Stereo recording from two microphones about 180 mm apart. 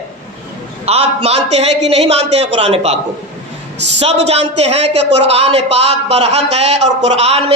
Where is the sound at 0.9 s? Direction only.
35° right (ahead or behind).